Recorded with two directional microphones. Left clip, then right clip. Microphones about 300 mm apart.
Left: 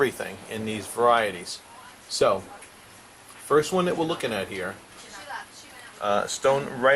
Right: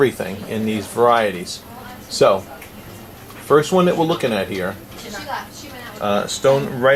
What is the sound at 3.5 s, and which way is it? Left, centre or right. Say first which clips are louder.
Speech: right 8 dB; centre.